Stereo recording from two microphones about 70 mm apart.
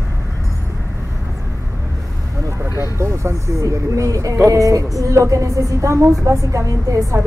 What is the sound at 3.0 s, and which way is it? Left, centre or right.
A woman's voice, right.